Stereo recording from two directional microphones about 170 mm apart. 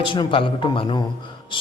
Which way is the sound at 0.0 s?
30° left (ahead or behind).